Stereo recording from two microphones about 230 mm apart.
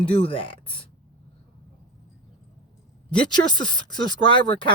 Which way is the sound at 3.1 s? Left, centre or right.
Centre.